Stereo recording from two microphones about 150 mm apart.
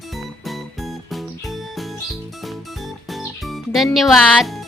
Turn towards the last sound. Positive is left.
turn(degrees=0)  # may be behind; listen again after turning